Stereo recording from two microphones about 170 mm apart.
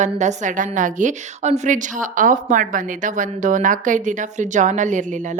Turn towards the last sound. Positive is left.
turn(degrees=-45)  # may be behind; listen again after turning